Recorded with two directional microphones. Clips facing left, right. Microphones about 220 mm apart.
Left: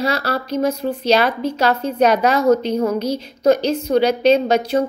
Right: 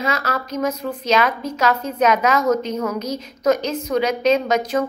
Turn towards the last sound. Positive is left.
turn(degrees=30)  # may be behind; listen again after turning